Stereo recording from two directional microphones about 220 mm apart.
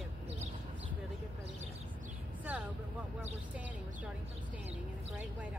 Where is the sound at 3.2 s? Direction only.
5° right (ahead or behind).